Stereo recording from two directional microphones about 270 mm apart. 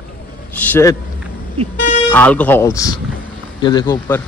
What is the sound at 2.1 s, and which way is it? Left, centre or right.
Speech, centre.